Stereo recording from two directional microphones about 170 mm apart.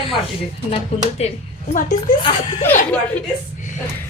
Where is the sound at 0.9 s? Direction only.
40° left (ahead or behind).